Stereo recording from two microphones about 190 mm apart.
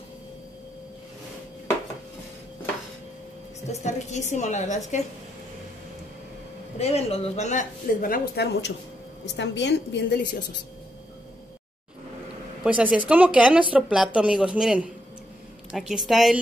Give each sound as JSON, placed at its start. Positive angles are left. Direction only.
{"t": 3.8, "sound": "speech", "side_deg": 40}
{"t": 6.8, "sound": "a woman's voice", "side_deg": 30}
{"t": 12.6, "sound": "a woman's voice", "side_deg": -5}